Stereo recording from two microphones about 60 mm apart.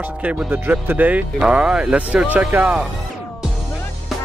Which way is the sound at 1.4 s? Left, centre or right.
Centre.